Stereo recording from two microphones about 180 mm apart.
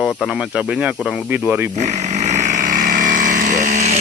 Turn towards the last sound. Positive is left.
turn(degrees=-40)  # may be behind; listen again after turning